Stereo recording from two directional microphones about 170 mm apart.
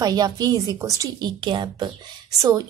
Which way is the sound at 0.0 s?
25° right (ahead or behind).